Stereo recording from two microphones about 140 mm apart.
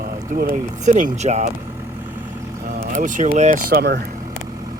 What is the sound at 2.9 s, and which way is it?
Speech, 65° right (ahead or behind).